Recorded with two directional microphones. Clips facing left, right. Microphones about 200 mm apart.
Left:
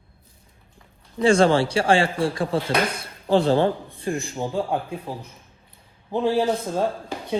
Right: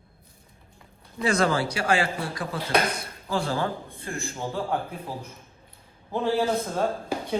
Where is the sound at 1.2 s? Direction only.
30° left (ahead or behind).